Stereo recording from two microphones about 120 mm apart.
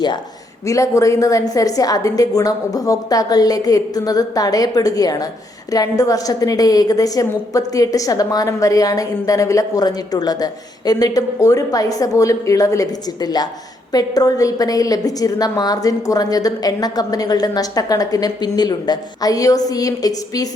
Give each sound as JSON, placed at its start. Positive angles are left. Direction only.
{"t": 0.6, "sound": "a woman's voice", "side_deg": 25}